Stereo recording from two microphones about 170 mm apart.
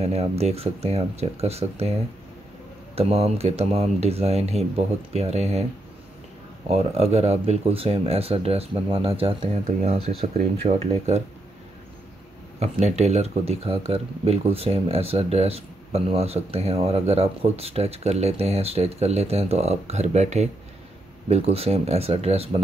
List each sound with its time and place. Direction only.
0.0 s speech: 35° right (ahead or behind)
3.0 s speech: 35° right (ahead or behind)
6.7 s speech: 35° right (ahead or behind)
12.5 s speech: 40° right (ahead or behind)